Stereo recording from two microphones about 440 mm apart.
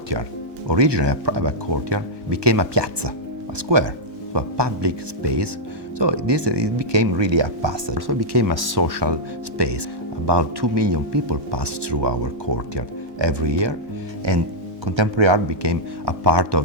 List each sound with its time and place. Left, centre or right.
0.7 s speech: right
14.3 s music: right
14.8 s speech: right